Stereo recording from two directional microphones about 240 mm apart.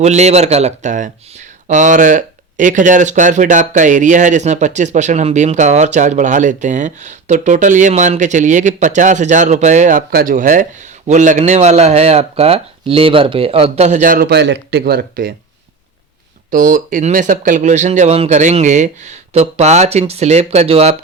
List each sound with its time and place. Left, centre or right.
0.0 s speech: right
16.5 s speech: right